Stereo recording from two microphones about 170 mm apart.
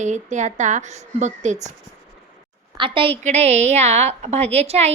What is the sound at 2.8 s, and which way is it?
A woman's voice, 30° right (ahead or behind).